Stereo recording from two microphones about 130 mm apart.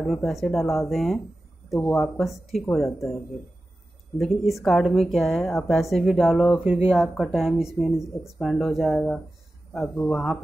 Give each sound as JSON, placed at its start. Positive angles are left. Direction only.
{"t": 0.0, "sound": "speech", "side_deg": 0}
{"t": 1.7, "sound": "speech", "side_deg": 15}
{"t": 2.0, "sound": "speech", "side_deg": 0}